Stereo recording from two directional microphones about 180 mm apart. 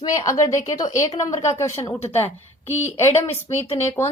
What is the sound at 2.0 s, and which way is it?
Speech, 35° left (ahead or behind).